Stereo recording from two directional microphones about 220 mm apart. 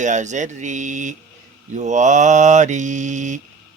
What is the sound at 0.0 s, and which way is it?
Mantra, 35° right (ahead or behind).